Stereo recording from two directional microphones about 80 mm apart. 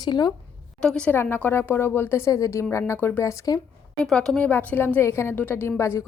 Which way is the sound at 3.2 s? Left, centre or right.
Left.